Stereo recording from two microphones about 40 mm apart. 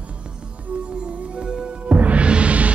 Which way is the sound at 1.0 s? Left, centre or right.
Right.